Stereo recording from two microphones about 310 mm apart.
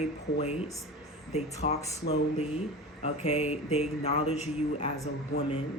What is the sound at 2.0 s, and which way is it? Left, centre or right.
Speech, left.